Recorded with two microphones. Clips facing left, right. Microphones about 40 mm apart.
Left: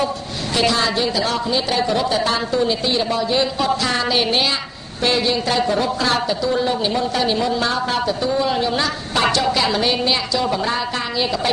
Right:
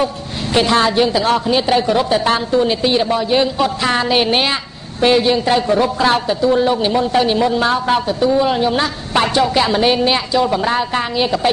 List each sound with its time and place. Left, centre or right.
0.6 s speech: right